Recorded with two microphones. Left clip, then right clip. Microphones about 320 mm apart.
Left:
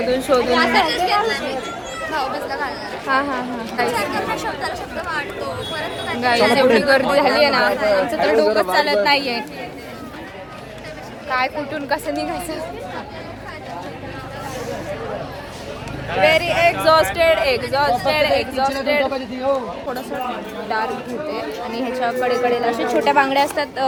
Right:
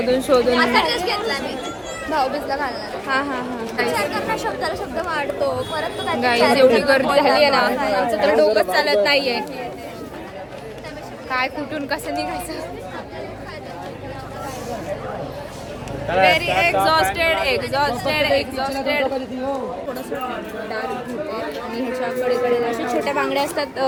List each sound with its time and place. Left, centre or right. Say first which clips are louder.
0.1 s speech: right 1 dB; centre
2.6 s speech: left 2 dB; centre
6.1 s speech: left 1 dB; centre
11.3 s speech: left 2 dB; centre
16.2 s speech: left 2 dB; centre
21.3 s speech: left 1 dB; centre